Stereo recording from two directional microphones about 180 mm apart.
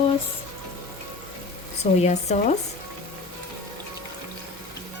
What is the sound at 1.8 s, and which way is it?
Speech, 40° left (ahead or behind).